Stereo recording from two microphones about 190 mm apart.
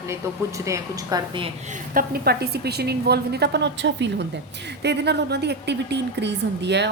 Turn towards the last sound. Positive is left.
turn(degrees=-65)  # may be behind; listen again after turning